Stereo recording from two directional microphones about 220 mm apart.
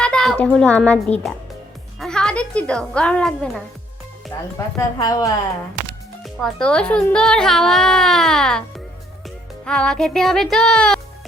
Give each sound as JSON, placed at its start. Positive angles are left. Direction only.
{"t": 0.0, "sound": "a woman's voice", "side_deg": 5}
{"t": 4.8, "sound": "a woman's voice", "side_deg": 15}
{"t": 6.2, "sound": "speech", "side_deg": 5}
{"t": 9.6, "sound": "speech", "side_deg": 5}